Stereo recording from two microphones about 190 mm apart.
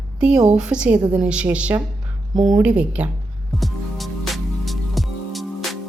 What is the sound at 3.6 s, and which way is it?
Music, centre (ahead or behind).